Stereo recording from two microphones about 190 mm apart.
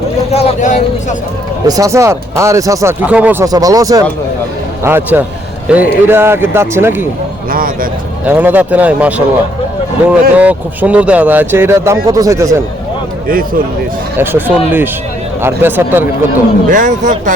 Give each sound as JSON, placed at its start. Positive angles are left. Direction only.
{"t": 0.3, "sound": "speech", "side_deg": 35}
{"t": 1.6, "sound": "speech", "side_deg": -20}
{"t": 3.4, "sound": "speech", "side_deg": -20}
{"t": 7.5, "sound": "a man's voice", "side_deg": -45}
{"t": 8.2, "sound": "speech", "side_deg": -10}
{"t": 13.2, "sound": "a man's voice", "side_deg": -50}
{"t": 14.2, "sound": "speech", "side_deg": -10}
{"t": 16.6, "sound": "a man's voice", "side_deg": -45}